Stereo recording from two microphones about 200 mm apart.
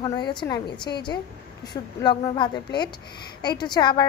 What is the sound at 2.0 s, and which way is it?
Speech, 25° left (ahead or behind).